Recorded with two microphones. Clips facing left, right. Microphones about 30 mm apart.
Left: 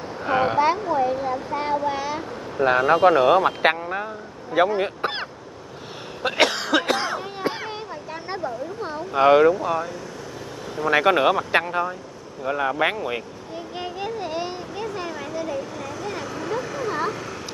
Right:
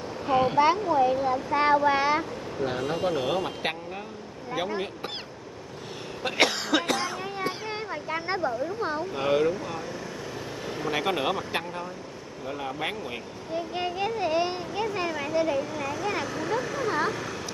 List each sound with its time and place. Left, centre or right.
0.2 s a sound: centre
1.0 s a sound: centre
1.5 s speech: right
2.6 s speech: left
6.2 s cough: centre
6.9 s speech: left
7.9 s a sound: centre
8.5 s speech: centre
9.1 s speech: left
9.5 s speech: centre
10.9 s speech: left
11.6 s speech: left
13.7 s speech: centre
16.3 s speech: centre